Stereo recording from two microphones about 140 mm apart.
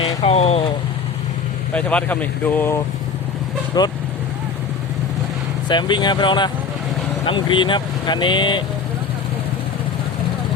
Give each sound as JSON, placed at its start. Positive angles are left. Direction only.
{"t": 0.2, "sound": "speech", "side_deg": 45}
{"t": 1.7, "sound": "speech", "side_deg": 10}
{"t": 3.7, "sound": "speech", "side_deg": 30}
{"t": 5.6, "sound": "speech", "side_deg": 35}